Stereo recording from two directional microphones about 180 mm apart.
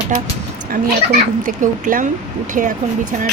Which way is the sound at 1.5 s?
45° right (ahead or behind).